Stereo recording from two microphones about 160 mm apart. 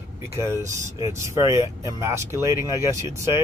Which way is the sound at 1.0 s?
20° right (ahead or behind).